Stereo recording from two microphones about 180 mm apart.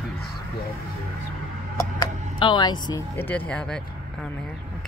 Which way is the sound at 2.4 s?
25° left (ahead or behind).